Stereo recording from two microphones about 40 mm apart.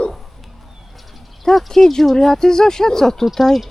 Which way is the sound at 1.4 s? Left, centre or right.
Centre.